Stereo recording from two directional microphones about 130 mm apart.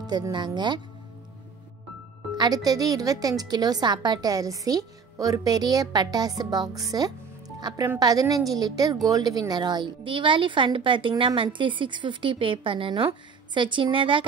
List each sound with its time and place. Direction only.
0.0 s a woman's voice: 35° right (ahead or behind)
2.3 s a woman's voice: 30° right (ahead or behind)